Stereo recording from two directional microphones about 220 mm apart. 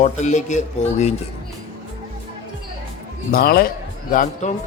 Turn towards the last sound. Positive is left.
turn(degrees=35)  # may be behind; listen again after turning